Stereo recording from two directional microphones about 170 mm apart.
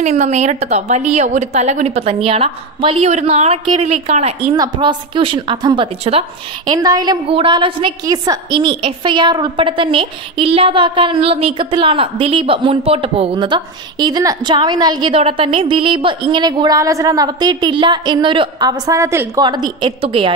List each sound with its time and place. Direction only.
0.0 s a woman's voice: 45° right (ahead or behind)